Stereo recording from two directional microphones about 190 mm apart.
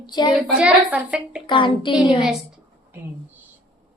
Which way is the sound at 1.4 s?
25° left (ahead or behind).